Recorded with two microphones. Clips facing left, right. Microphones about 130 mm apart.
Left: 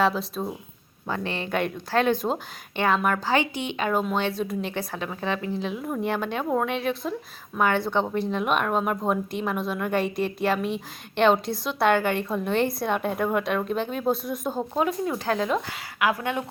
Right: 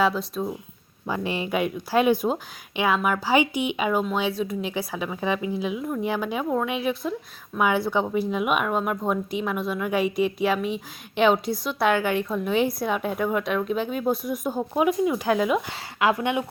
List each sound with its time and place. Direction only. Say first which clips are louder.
0.0 s speech: right 1 dB; centre (ahead or behind)
1.0 s speech: right 2 dB; 10° right (ahead or behind)
14.8 s speech: right 5 dB; 15° right (ahead or behind)
16.0 s speech: right 3 dB; 25° right (ahead or behind)